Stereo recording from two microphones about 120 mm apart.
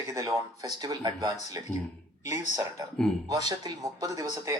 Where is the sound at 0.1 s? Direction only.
25° right (ahead or behind).